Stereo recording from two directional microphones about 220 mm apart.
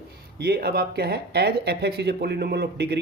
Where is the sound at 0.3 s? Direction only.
45° right (ahead or behind).